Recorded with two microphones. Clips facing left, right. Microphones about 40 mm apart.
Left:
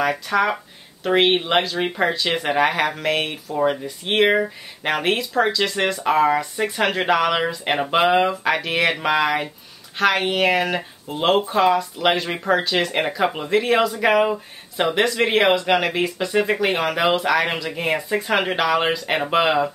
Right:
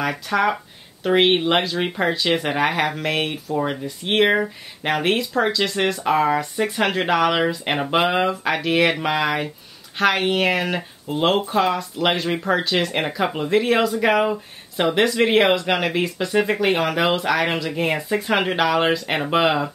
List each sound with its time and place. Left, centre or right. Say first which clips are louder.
0.0 s speech: left 1 dB; centre